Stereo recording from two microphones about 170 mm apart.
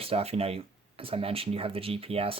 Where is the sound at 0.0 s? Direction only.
35° right (ahead or behind).